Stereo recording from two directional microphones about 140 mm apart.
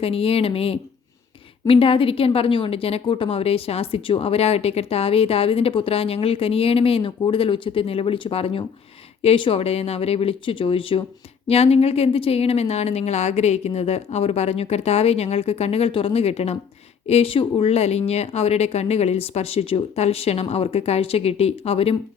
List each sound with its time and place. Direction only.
0.0 s a woman's voice: 45° left (ahead or behind)